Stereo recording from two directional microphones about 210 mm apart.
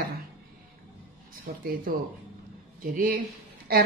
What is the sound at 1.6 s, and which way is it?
A woman's voice, 45° right (ahead or behind).